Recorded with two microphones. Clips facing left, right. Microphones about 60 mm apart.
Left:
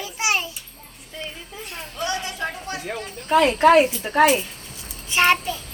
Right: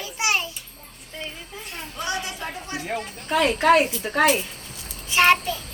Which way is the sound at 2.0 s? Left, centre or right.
Centre.